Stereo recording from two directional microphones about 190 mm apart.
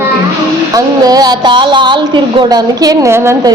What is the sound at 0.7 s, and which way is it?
A woman's voice, 20° right (ahead or behind).